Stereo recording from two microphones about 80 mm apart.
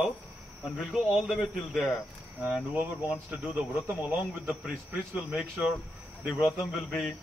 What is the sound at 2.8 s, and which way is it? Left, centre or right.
Speech, right.